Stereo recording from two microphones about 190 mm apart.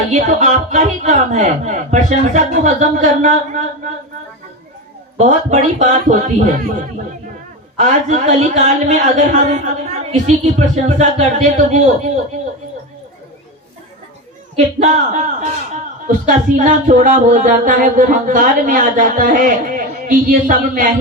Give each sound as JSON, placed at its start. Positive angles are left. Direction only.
{"t": 0.1, "sound": "a man's voice", "side_deg": -40}
{"t": 5.1, "sound": "a man's voice", "side_deg": -35}
{"t": 7.8, "sound": "a man's voice", "side_deg": -40}
{"t": 14.5, "sound": "a man's voice", "side_deg": -40}